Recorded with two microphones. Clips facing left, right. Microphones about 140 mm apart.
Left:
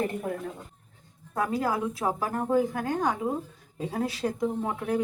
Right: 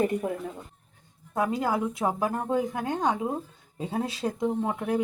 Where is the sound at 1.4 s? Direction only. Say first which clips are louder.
Right 1 dB; 20° right (ahead or behind).